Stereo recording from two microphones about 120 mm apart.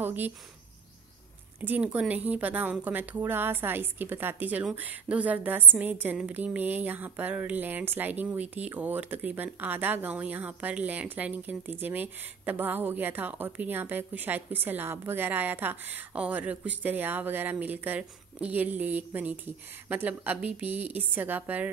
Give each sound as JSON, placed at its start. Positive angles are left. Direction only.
{"t": 0.0, "sound": "speech", "side_deg": -15}
{"t": 1.6, "sound": "a woman's voice", "side_deg": -15}